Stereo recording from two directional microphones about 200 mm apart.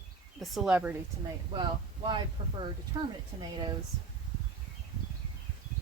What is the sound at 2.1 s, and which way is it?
Speech, 25° right (ahead or behind).